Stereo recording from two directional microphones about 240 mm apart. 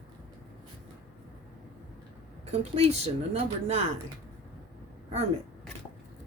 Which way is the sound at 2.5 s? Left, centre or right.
Right.